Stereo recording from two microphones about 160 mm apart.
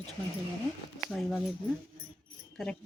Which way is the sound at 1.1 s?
Centre (ahead or behind).